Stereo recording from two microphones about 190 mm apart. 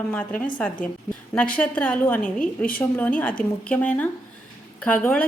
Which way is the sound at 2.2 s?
45° left (ahead or behind).